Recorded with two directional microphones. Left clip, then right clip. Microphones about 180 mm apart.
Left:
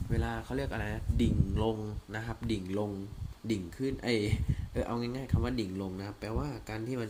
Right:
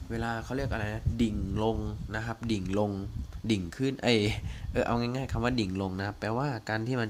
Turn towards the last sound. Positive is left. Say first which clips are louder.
# right 6 dB
turn(degrees=-45)  # may be behind; listen again after turning